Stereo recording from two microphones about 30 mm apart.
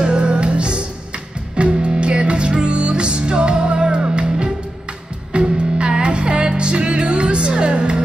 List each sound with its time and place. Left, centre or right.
0.2 s music: right